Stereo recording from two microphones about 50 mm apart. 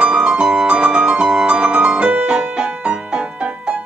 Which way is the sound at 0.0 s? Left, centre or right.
Centre.